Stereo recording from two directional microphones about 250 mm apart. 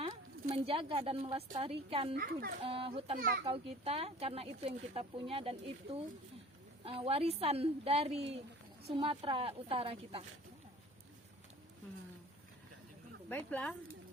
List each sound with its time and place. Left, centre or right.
0.4 s speech: right
2.1 s a child's voice: right
2.6 s speech: right
13.2 s speech: centre